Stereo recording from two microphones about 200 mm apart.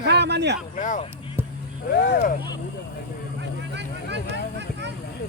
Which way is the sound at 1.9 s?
55° left (ahead or behind).